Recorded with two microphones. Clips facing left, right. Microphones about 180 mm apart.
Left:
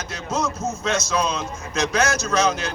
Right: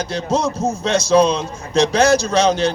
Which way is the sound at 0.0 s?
35° right (ahead or behind).